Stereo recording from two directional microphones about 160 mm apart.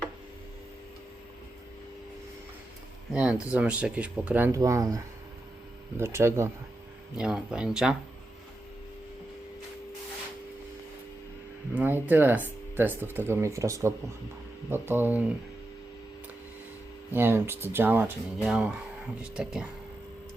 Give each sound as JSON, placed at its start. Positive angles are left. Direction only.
{"t": 3.1, "sound": "speech", "side_deg": -5}
{"t": 6.0, "sound": "speech", "side_deg": -15}
{"t": 7.2, "sound": "speech", "side_deg": -5}
{"t": 11.7, "sound": "speech", "side_deg": -10}
{"t": 17.1, "sound": "speech", "side_deg": -15}